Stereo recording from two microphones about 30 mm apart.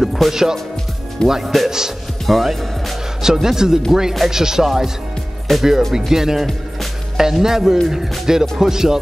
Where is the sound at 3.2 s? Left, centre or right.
Centre.